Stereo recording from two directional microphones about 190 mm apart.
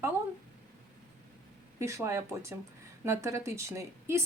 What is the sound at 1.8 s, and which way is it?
Speech, 15° right (ahead or behind).